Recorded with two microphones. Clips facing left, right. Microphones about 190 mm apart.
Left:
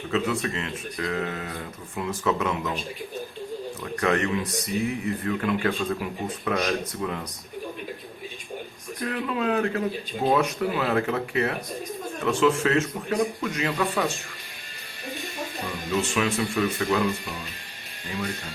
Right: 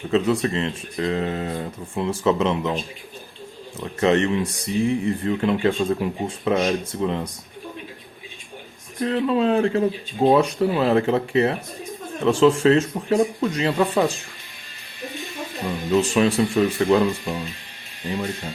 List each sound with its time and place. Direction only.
0.1 s speech: 30° right (ahead or behind)
9.0 s speech: 30° right (ahead or behind)
15.9 s speech: 35° right (ahead or behind)